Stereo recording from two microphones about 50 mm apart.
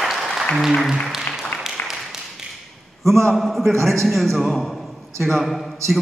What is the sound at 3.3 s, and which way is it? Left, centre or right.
A man's voice, centre.